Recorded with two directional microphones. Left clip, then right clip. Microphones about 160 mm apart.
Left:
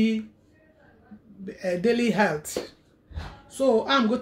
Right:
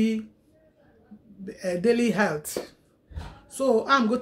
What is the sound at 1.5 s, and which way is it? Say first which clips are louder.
Speech: even; 5° right (ahead or behind).